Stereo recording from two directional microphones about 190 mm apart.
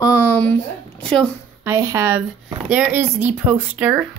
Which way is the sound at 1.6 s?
15° right (ahead or behind).